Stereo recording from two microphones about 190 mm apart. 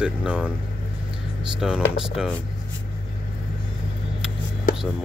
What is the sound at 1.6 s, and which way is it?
Speech, centre (ahead or behind).